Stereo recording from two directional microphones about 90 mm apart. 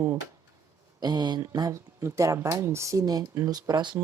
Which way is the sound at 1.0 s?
50° right (ahead or behind).